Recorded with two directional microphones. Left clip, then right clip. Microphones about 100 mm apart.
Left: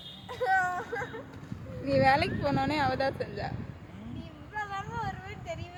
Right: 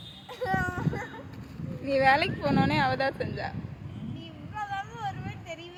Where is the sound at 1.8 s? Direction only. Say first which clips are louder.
Right 2 dB; 5° right (ahead or behind).